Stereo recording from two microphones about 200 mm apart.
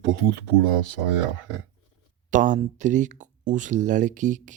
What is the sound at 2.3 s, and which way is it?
Speech, 40° right (ahead or behind).